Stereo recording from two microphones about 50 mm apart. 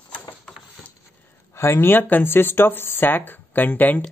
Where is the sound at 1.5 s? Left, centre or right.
Left.